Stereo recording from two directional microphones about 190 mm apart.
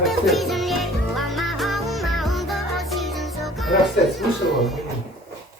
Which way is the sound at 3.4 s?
Centre (ahead or behind).